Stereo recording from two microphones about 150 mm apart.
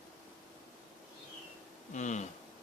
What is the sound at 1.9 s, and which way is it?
Speech, 55° left (ahead or behind).